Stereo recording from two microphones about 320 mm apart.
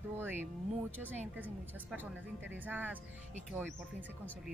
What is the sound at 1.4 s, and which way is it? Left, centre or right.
Speech, centre.